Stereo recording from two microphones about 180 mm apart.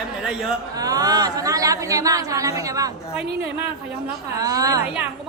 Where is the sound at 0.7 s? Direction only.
20° right (ahead or behind).